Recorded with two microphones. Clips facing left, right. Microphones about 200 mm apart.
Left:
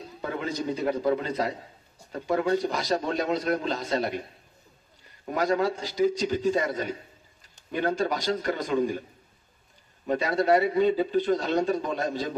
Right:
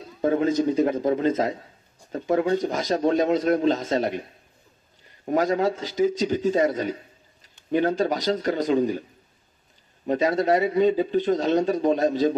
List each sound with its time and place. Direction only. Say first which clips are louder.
0.2 s speech: right 10 dB; 40° right (ahead or behind)
5.3 s speech: right 3 dB; 45° right (ahead or behind)
7.8 s speech: right 2 dB; 45° right (ahead or behind)
8.2 s speech: right 4 dB; 50° left (ahead or behind)
8.5 s speech: right 5 dB; 45° right (ahead or behind)
10.4 s a man's voice: even; 40° right (ahead or behind)